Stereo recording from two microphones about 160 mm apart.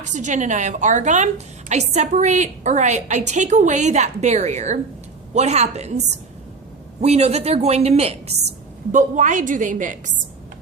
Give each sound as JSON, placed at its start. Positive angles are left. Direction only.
{"t": 0.1, "sound": "a woman's voice", "side_deg": -50}
{"t": 7.0, "sound": "a woman's voice", "side_deg": -40}
{"t": 8.9, "sound": "a woman's voice", "side_deg": -50}